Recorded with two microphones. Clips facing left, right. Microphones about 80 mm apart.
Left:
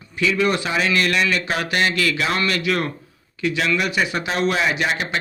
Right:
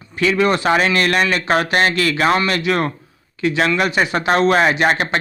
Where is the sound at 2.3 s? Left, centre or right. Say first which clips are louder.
Right 4 dB; right.